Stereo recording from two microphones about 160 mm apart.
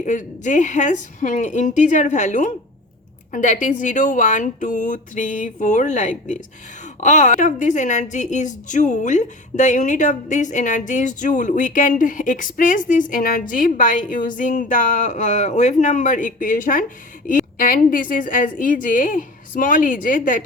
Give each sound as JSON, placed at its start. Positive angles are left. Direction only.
{"t": 0.0, "sound": "a woman's voice", "side_deg": 50}